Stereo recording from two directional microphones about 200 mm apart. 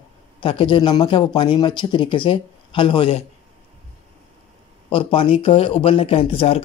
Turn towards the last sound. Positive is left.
turn(degrees=30)  # may be behind; listen again after turning